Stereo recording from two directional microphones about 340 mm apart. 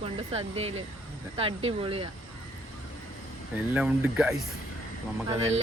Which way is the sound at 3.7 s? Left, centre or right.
Centre.